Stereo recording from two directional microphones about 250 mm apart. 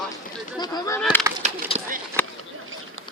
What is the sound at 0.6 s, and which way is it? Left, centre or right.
Speech, centre.